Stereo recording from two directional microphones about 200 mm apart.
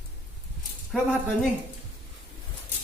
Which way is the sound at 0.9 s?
Centre (ahead or behind).